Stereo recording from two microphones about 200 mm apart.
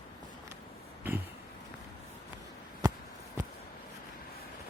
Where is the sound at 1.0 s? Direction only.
10° right (ahead or behind).